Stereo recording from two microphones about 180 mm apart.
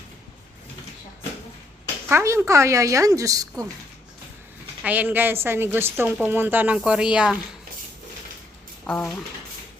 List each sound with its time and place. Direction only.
2.0 s a woman's voice: 15° right (ahead or behind)
4.8 s a woman's voice: 10° right (ahead or behind)
8.9 s speech: 10° left (ahead or behind)